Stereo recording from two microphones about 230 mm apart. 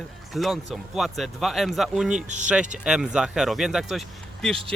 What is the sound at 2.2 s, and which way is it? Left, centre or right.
Speech, right.